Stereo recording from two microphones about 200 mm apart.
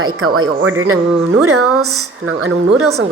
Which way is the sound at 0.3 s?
90° right.